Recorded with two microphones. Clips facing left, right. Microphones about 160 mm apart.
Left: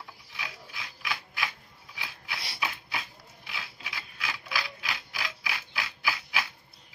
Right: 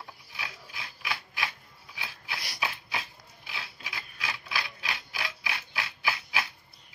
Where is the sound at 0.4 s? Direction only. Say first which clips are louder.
Even; 30° right (ahead or behind).